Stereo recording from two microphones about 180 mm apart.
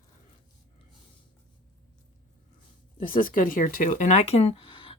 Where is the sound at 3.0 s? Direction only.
50° left (ahead or behind); by 4.9 s 25° left (ahead or behind).